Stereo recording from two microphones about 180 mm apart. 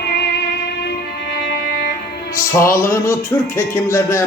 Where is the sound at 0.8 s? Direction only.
60° left (ahead or behind).